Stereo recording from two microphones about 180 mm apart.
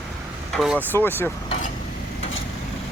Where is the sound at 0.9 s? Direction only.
10° left (ahead or behind).